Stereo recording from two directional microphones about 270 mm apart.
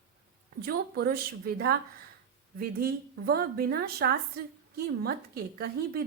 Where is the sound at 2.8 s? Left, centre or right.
Right.